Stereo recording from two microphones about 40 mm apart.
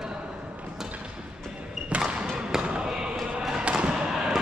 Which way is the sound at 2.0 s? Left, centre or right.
Centre.